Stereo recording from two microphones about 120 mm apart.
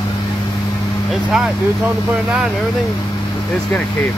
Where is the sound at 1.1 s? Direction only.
Centre (ahead or behind).